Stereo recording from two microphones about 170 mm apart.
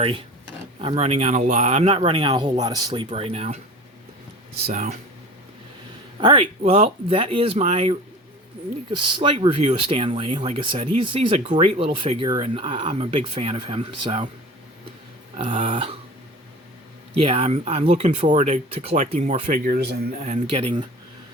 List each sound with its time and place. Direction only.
0.8 s speech: 35° right (ahead or behind)
3.1 s speech: 35° right (ahead or behind)
4.6 s speech: 45° right (ahead or behind)
6.1 s speech: 30° right (ahead or behind)
9.1 s speech: 30° right (ahead or behind)
15.4 s speech: 30° right (ahead or behind)
17.2 s speech: 35° right (ahead or behind)
19.5 s speech: 60° right (ahead or behind)
20.2 s speech: 40° right (ahead or behind)